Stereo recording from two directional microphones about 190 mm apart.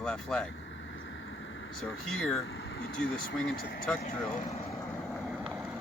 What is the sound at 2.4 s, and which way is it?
Speech, 90° left.